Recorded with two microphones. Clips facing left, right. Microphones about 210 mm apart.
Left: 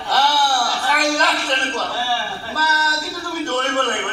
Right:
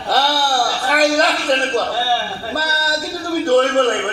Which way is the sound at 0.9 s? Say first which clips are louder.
Right 6 dB; 35° right (ahead or behind).